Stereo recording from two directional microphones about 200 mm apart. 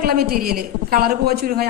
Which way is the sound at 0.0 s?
50° right (ahead or behind).